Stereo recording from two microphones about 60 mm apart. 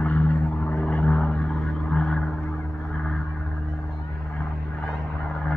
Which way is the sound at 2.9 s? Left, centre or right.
Centre.